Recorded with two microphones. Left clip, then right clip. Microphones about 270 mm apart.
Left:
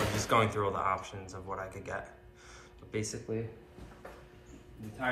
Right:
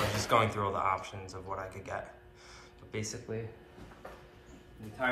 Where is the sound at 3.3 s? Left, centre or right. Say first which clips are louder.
Left 3 dB; right.